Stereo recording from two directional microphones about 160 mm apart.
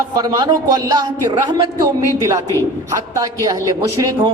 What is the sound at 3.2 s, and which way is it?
Speech, 20° right (ahead or behind).